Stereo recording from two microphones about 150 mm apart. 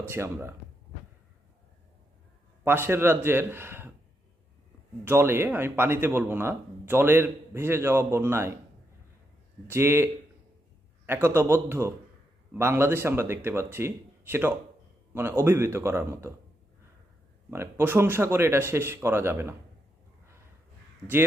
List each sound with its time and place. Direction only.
0.1 s speech: 15° right (ahead or behind)
2.6 s speech: 15° right (ahead or behind)
5.0 s speech: 15° right (ahead or behind)
9.6 s speech: 15° right (ahead or behind)
17.5 s speech: 15° right (ahead or behind)